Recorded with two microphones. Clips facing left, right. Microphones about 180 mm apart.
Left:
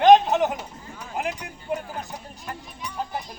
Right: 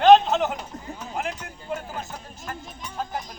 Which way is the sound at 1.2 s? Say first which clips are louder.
Left 3 dB; 15° left (ahead or behind).